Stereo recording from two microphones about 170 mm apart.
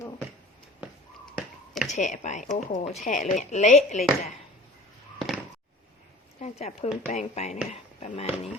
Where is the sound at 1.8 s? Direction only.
45° left (ahead or behind).